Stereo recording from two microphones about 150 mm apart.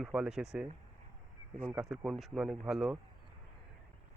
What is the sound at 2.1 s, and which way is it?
Speech, centre (ahead or behind).